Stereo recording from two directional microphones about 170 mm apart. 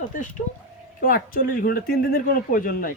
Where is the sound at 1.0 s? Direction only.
60° left (ahead or behind).